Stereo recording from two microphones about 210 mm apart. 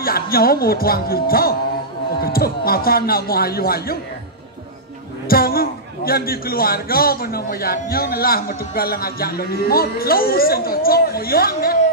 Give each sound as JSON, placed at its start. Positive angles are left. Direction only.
{"t": 0.0, "sound": "a man's voice", "side_deg": 45}
{"t": 5.3, "sound": "a man's voice", "side_deg": 45}